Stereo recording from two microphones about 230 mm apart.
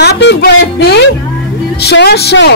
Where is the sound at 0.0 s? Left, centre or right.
Left.